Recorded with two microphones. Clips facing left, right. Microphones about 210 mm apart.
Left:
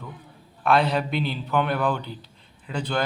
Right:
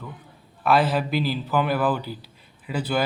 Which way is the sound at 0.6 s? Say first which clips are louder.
Right 1 dB; 5° right (ahead or behind).